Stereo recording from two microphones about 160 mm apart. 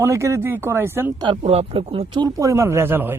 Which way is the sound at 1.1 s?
30° right (ahead or behind).